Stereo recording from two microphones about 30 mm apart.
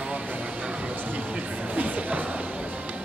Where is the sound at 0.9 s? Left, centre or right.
Right.